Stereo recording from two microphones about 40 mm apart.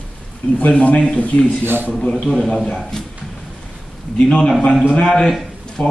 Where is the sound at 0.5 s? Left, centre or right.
Left.